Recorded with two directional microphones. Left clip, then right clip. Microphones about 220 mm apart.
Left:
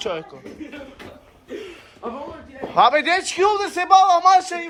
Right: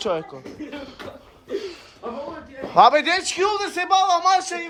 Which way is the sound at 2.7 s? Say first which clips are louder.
Right 1 dB; 25° right (ahead or behind).